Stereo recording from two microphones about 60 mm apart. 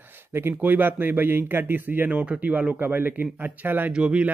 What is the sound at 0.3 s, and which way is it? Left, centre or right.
Speech, right.